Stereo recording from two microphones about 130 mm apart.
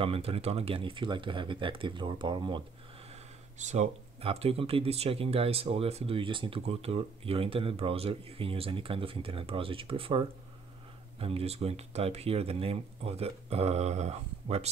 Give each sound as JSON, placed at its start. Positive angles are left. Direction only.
{"t": 0.0, "sound": "speech", "side_deg": -45}
{"t": 3.5, "sound": "speech", "side_deg": -65}